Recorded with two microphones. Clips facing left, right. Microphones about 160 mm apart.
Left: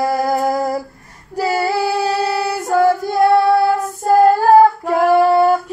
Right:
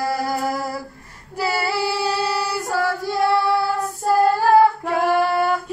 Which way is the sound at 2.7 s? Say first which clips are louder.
Left 9 dB; 50° left (ahead or behind).